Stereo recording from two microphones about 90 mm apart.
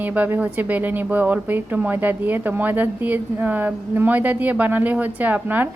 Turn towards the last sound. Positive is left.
turn(degrees=-20)  # may be behind; listen again after turning